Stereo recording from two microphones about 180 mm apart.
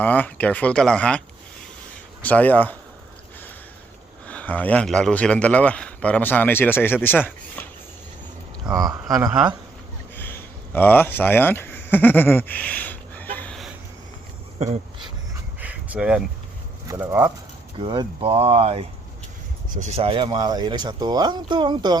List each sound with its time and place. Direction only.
0.0 s a man's voice: 10° left (ahead or behind)
2.2 s a man's voice: 10° left (ahead or behind)
4.3 s a man's voice: 10° left (ahead or behind)
8.7 s speech: 20° right (ahead or behind)
10.2 s a sound: 10° left (ahead or behind)
14.6 s speech: 35° right (ahead or behind)
15.6 s a sound: 5° right (ahead or behind)
16.9 s speech: 15° right (ahead or behind)
17.7 s speech: 30° right (ahead or behind)